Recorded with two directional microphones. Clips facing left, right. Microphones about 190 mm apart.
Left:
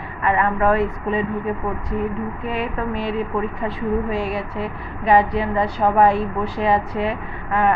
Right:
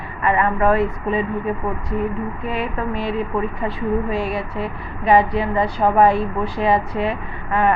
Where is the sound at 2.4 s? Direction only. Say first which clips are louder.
Even; centre (ahead or behind).